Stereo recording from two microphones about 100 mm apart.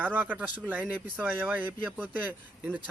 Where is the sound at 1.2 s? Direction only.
15° right (ahead or behind).